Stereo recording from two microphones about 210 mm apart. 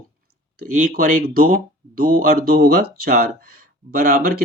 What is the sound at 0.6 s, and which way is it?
Speech, 40° right (ahead or behind).